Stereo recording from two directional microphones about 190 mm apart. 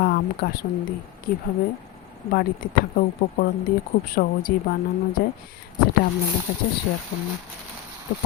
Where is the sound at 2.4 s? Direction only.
50° left (ahead or behind).